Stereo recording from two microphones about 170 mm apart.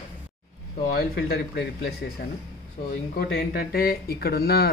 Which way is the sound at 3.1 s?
65° left (ahead or behind).